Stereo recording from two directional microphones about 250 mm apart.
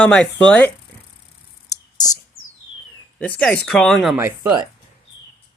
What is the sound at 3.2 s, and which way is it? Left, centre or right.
Speech, centre.